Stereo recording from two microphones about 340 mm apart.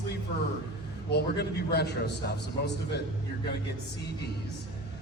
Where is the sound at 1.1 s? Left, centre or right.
Left.